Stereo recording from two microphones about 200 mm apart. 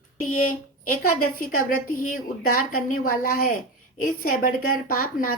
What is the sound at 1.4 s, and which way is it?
Speech, 45° left (ahead or behind).